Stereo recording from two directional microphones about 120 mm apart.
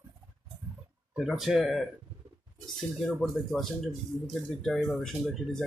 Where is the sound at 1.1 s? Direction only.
Centre (ahead or behind).